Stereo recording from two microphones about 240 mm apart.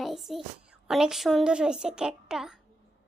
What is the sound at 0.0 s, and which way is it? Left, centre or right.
A woman's voice, centre.